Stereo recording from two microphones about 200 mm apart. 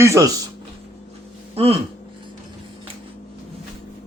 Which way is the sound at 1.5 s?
30° right (ahead or behind).